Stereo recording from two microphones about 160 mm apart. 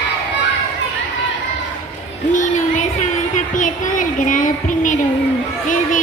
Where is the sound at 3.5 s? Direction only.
55° left (ahead or behind).